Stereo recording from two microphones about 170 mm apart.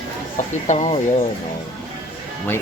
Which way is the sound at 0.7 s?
40° left (ahead or behind).